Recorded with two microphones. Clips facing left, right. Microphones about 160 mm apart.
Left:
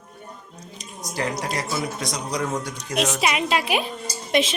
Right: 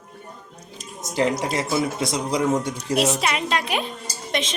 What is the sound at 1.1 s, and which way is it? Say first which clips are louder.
Speech: right 5 dB; 20° right (ahead or behind).